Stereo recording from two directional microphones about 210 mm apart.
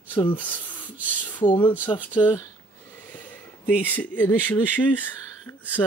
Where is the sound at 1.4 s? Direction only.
20° left (ahead or behind).